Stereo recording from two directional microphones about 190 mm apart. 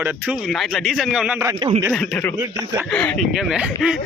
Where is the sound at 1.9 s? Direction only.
5° left (ahead or behind).